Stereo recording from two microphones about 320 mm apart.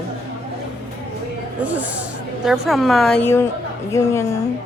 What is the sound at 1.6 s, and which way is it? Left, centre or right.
A woman's voice, centre.